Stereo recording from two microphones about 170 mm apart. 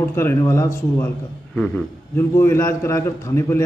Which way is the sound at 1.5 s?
5° left (ahead or behind).